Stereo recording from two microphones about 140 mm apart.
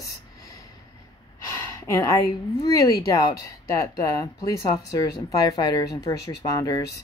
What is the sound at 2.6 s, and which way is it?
Speech, 25° left (ahead or behind).